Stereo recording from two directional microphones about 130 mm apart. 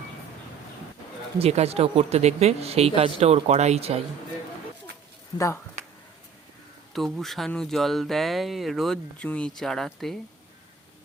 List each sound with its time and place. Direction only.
1.4 s speech: 55° right (ahead or behind)
6.9 s speech: centre (ahead or behind)